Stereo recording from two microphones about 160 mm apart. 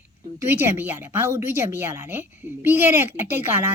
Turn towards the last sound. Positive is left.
turn(degrees=-15)  # may be behind; listen again after turning